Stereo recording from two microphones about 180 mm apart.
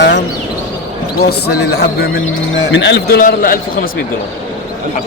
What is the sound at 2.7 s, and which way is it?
Speech, 85° left.